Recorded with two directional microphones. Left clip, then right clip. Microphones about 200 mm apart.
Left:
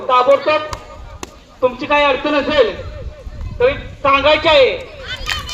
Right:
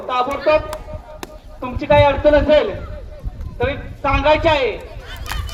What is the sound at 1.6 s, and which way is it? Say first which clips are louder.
A woman's voice: even; 55° right (ahead or behind).